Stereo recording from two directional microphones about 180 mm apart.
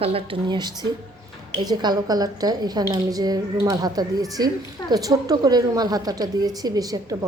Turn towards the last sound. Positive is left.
turn(degrees=-20)  # may be behind; listen again after turning